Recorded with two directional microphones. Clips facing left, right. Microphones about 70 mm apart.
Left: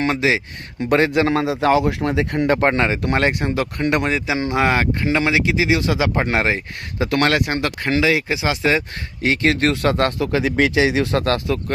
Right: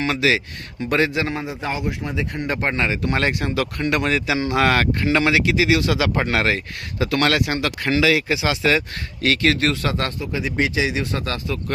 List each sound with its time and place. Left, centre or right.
0.1 s speech: left
0.8 s speech: left
1.3 s speech: left
2.6 s speech: left
4.0 s speech: centre
7.0 s speech: left
9.7 s speech: left
10.2 s speech: left